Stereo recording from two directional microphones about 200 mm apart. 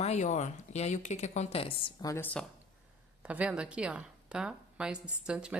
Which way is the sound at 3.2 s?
5° right (ahead or behind).